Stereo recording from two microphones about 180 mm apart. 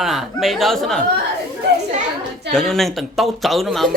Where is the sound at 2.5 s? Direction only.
Centre (ahead or behind).